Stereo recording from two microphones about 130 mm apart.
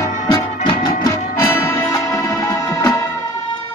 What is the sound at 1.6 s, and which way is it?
Music, 20° left (ahead or behind).